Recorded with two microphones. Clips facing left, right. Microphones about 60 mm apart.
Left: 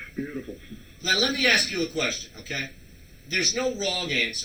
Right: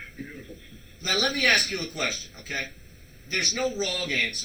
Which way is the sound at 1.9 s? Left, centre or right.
Right.